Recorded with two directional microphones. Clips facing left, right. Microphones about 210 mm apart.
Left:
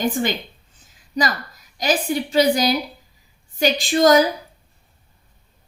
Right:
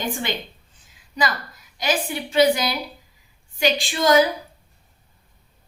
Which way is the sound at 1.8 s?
40° left (ahead or behind).